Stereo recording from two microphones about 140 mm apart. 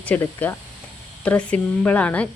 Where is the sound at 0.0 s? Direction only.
10° left (ahead or behind).